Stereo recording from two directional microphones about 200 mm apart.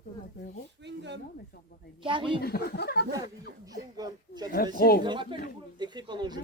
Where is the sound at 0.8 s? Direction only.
60° right (ahead or behind).